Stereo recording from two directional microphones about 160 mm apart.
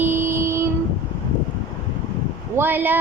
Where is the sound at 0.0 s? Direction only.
15° right (ahead or behind).